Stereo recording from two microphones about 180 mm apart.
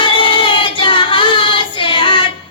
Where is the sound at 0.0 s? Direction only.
30° left (ahead or behind).